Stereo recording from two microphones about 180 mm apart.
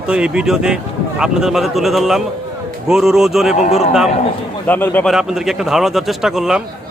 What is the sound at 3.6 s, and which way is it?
Speech, 35° left (ahead or behind).